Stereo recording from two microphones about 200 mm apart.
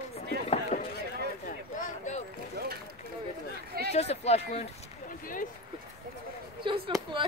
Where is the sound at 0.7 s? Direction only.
30° left (ahead or behind).